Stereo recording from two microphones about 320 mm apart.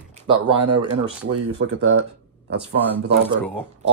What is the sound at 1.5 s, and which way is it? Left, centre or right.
Speech, right.